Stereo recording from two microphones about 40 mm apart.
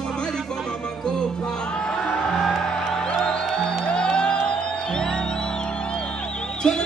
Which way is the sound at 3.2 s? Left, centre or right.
Left.